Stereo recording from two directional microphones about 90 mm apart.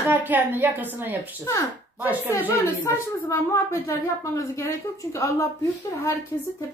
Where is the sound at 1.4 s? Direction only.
35° left (ahead or behind).